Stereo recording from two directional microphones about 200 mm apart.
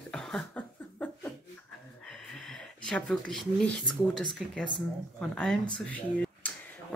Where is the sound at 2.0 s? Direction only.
Centre (ahead or behind).